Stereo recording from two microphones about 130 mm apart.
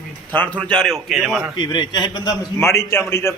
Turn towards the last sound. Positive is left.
turn(degrees=20)  # may be behind; listen again after turning